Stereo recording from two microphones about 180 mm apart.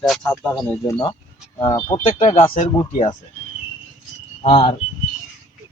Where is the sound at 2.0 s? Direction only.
40° left (ahead or behind).